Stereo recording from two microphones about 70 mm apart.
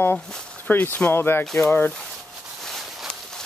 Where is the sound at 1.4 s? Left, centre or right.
Centre.